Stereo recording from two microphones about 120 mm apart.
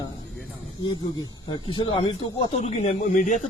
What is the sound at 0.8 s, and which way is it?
Speech, 40° left (ahead or behind).